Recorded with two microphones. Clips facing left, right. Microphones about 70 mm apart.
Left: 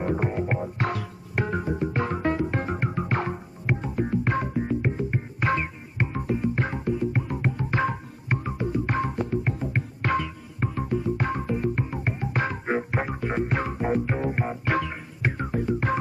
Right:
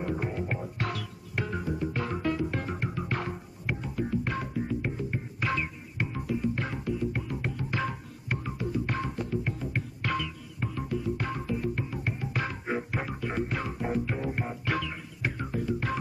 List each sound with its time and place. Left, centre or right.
0.0 s music: left